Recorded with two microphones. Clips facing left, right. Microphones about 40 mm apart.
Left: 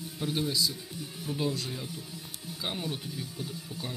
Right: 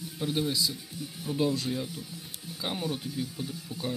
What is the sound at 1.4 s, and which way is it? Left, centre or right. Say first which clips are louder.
Speech: right 4 dB; right.